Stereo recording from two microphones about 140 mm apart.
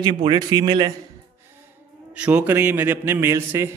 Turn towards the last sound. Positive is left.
turn(degrees=-20)  # may be behind; listen again after turning